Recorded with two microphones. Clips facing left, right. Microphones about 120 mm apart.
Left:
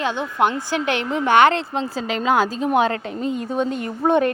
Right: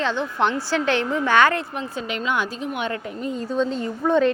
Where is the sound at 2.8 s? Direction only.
90° left.